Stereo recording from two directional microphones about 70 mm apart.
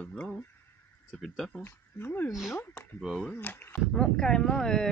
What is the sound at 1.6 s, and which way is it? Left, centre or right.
Speech, left.